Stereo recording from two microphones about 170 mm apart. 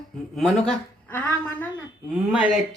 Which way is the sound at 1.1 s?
10° left (ahead or behind).